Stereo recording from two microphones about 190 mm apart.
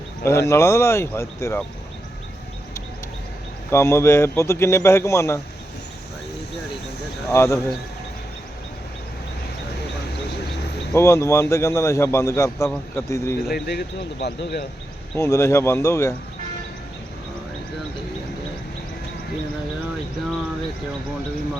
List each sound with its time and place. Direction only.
0.3 s a man's voice: 15° left (ahead or behind)
3.7 s a man's voice: 15° left (ahead or behind)
7.3 s a man's voice: 15° left (ahead or behind)
10.9 s a man's voice: 15° left (ahead or behind)
13.5 s speech: 60° left (ahead or behind)
15.1 s a man's voice: 15° left (ahead or behind)